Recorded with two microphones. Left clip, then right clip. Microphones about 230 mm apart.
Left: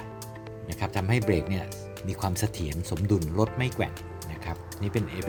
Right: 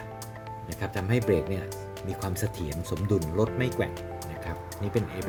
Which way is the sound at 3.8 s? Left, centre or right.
Left.